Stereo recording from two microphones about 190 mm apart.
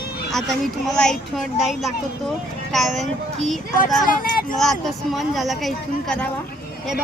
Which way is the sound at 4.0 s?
45° left (ahead or behind).